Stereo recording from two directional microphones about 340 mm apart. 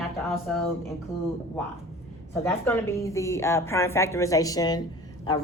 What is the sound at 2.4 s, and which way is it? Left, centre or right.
A woman's voice, centre.